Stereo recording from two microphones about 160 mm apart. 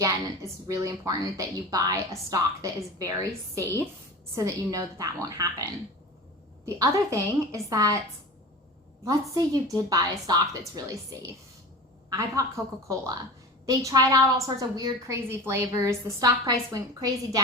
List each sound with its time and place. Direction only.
0.0 s a woman's voice: 20° right (ahead or behind)
6.7 s a woman's voice: 20° right (ahead or behind)
9.0 s a woman's voice: 20° right (ahead or behind)
12.4 s a woman's voice: 20° right (ahead or behind)
13.7 s a woman's voice: 20° right (ahead or behind)